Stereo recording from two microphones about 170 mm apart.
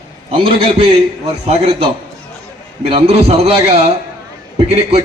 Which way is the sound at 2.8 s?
35° right (ahead or behind).